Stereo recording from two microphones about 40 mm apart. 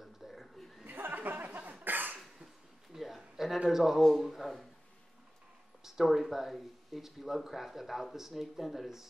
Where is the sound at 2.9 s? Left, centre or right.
Centre.